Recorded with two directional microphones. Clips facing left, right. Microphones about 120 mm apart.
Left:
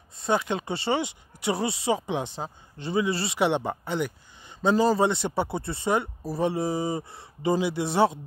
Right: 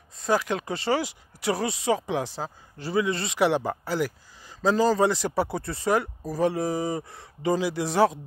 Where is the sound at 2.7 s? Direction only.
30° left (ahead or behind).